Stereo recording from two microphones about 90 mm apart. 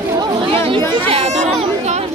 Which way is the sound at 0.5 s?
80° right.